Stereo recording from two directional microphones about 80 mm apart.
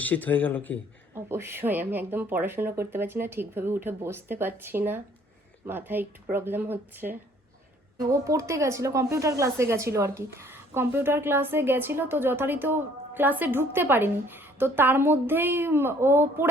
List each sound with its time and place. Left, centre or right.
0.0 s speech: left
1.1 s speech: right
7.9 s speech: right